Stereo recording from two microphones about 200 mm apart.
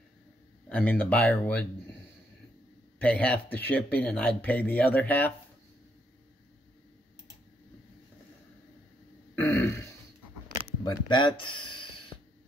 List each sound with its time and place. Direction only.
0.7 s speech: 5° left (ahead or behind)
3.0 s speech: 5° left (ahead or behind)
9.3 s throat clearing: 10° left (ahead or behind)
10.8 s speech: 20° left (ahead or behind)